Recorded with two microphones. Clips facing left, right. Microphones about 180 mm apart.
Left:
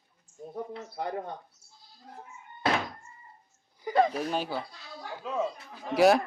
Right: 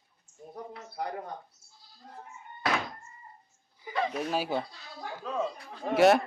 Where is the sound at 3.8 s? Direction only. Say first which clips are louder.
Left 7 dB; 40° left (ahead or behind).